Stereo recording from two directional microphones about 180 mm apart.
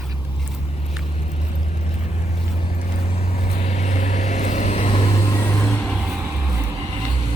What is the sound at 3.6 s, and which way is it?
Vehicle, 35° left (ahead or behind).